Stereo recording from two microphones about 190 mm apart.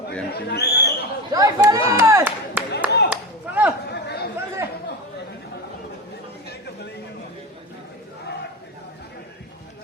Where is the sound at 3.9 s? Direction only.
60° left (ahead or behind).